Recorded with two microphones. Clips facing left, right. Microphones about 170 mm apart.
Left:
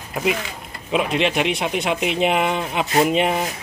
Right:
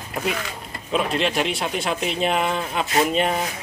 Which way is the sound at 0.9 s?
10° left (ahead or behind).